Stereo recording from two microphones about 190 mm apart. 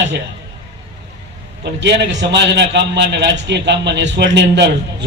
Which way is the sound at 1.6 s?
65° right (ahead or behind).